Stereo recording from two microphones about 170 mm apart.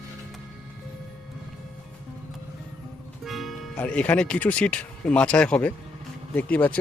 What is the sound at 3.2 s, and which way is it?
Music, centre (ahead or behind).